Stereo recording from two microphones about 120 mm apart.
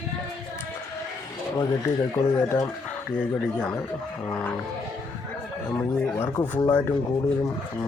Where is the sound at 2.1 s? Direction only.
25° left (ahead or behind).